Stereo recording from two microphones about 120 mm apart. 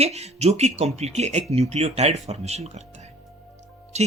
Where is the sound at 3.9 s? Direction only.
65° right (ahead or behind).